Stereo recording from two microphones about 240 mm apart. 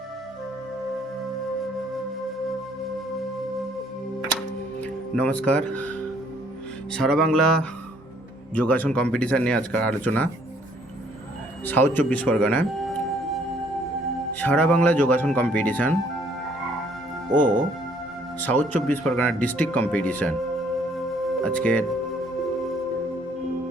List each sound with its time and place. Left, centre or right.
4.4 s music: centre
6.9 s speech: centre
11.6 s speech: centre
14.3 s speech: centre
17.3 s speech: right
18.3 s speech: centre
21.4 s speech: centre